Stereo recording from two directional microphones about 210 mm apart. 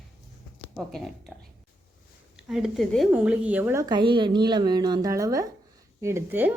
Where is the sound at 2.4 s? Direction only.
Centre (ahead or behind).